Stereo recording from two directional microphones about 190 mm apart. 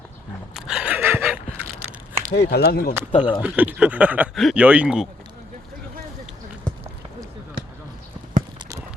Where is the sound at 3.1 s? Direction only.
25° left (ahead or behind).